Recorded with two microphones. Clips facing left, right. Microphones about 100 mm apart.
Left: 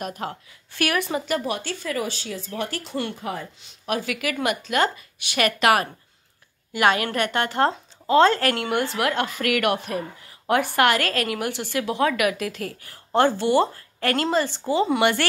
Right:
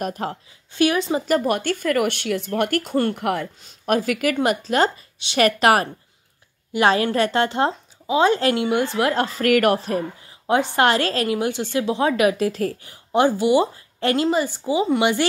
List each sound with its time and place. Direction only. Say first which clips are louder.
0.0 s a woman's voice: right 4 dB; 40° right (ahead or behind)
0.7 s a woman's voice: right 5 dB; 20° right (ahead or behind)
1.2 s speech: right 6 dB; 45° right (ahead or behind)
3.2 s speech: right 7 dB; 70° right (ahead or behind)
3.8 s a woman's voice: right 6 dB; 45° right (ahead or behind); by 7.7 s 20° right (ahead or behind)
7.7 s speech: left 3 dB; 10° right (ahead or behind)
9.0 s a woman's voice: right 4 dB; 35° right (ahead or behind)
10.5 s a woman's voice: right 2 dB; 20° right (ahead or behind)
12.8 s speech: even; 15° right (ahead or behind)